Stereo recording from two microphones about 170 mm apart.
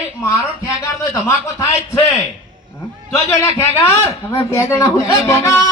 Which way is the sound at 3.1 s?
15° left (ahead or behind).